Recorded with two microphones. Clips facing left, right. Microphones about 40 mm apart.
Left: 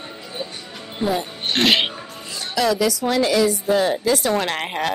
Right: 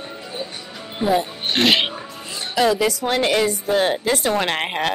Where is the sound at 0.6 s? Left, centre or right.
Centre.